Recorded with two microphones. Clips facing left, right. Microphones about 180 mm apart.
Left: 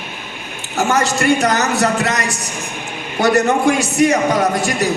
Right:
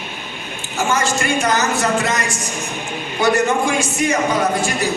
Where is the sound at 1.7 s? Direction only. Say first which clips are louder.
Left 2 dB; 65° left (ahead or behind).